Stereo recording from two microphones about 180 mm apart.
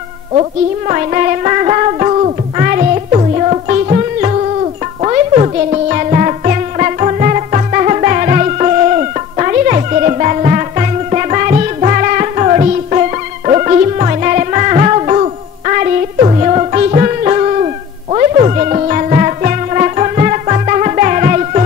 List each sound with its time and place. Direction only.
0.3 s music: 35° right (ahead or behind)
2.6 s music: 50° right (ahead or behind)
2.9 s music: 35° right (ahead or behind)